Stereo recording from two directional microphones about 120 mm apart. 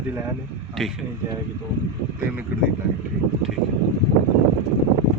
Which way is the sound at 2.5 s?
15° right (ahead or behind).